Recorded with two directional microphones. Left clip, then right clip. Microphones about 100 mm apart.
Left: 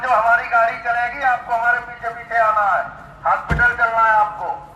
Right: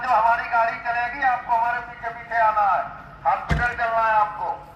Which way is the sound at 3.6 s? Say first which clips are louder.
Left 8 dB; 10° left (ahead or behind).